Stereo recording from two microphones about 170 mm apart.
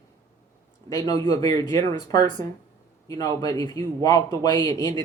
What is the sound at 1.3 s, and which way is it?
Speech, 20° left (ahead or behind).